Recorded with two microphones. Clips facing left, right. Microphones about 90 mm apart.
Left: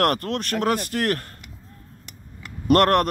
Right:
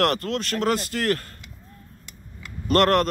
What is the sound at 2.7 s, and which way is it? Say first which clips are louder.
Speech: left 2 dB; 55° left (ahead or behind).